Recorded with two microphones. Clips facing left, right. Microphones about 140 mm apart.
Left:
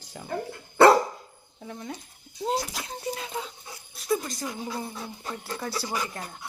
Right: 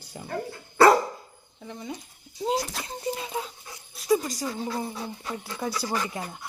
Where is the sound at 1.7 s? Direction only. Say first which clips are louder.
Right 1 dB; 5° right (ahead or behind).